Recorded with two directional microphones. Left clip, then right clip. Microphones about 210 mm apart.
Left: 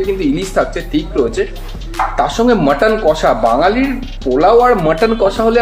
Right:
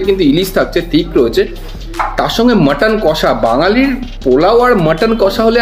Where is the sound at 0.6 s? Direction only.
35° right (ahead or behind).